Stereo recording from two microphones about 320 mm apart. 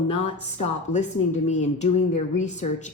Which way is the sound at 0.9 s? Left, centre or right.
Left.